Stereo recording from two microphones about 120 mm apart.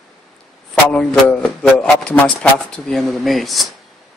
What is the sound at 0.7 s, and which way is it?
A man's voice, 10° left (ahead or behind).